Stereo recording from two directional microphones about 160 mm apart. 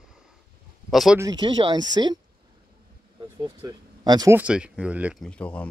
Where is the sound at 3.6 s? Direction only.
25° right (ahead or behind).